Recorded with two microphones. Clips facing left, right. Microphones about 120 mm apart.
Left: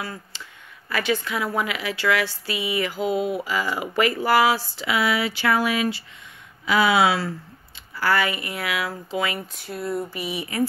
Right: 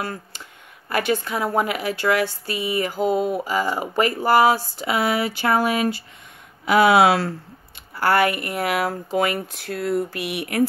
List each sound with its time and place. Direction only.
0.0 s speech: 50° right (ahead or behind)
9.5 s speech: 90° right; by 10.7 s 70° right (ahead or behind)